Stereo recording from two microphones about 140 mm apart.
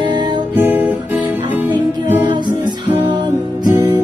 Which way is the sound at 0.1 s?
30° right (ahead or behind).